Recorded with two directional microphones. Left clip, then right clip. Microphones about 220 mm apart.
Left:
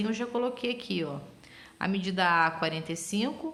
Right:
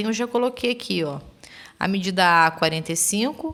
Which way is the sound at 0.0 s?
40° right (ahead or behind).